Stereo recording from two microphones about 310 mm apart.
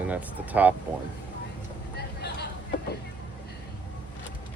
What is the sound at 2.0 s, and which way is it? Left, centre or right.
Vehicle, left.